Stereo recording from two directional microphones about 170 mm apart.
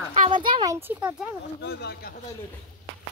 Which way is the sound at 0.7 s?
10° right (ahead or behind).